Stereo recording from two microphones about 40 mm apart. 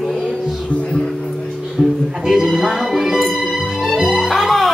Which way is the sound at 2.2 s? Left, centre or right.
Centre.